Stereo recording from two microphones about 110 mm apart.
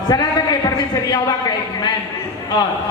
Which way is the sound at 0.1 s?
40° left (ahead or behind).